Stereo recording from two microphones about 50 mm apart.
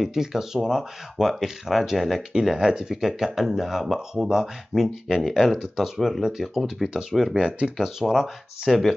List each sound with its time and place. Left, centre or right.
0.0 s speech: centre
2.3 s speech: centre
6.9 s speech: centre
7.3 s speech: right
7.8 s speech: centre
8.6 s speech: centre